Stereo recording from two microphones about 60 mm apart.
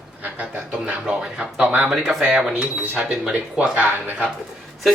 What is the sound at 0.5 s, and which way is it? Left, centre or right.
Speech, centre.